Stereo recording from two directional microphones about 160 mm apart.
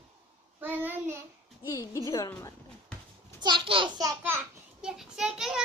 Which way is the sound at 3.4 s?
30° right (ahead or behind).